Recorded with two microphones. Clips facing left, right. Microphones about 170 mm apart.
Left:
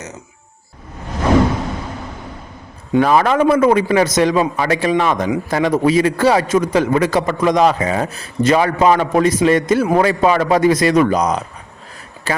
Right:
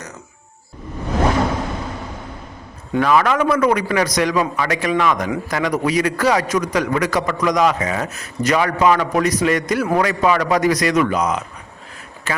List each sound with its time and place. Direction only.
3.0 s a man's voice: 35° left (ahead or behind)
11.0 s speech: 40° left (ahead or behind)
12.3 s a sound: 35° left (ahead or behind)